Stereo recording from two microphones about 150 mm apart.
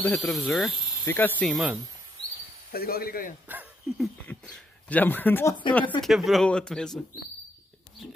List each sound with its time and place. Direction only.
0.0 s speech: 10° left (ahead or behind)
1.0 s speech: 15° left (ahead or behind)
1.4 s speech: centre (ahead or behind)
2.7 s speech: 85° left
4.3 s speech: 10° left (ahead or behind)
6.0 s speech: centre (ahead or behind)